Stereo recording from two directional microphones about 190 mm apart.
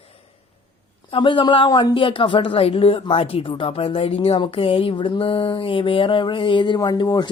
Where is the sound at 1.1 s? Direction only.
25° left (ahead or behind).